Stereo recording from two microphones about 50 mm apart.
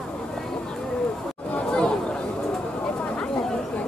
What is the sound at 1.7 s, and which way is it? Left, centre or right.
Chatter, centre.